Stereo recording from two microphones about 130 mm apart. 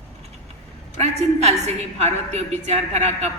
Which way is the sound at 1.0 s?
55° right (ahead or behind).